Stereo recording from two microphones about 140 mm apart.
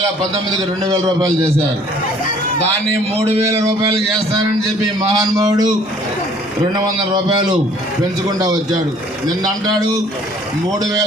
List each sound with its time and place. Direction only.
0.5 s a man's voice: 25° right (ahead or behind)
3.2 s speech: 45° right (ahead or behind)
4.9 s a man's voice: 25° right (ahead or behind)
6.7 s a man's voice: 30° right (ahead or behind)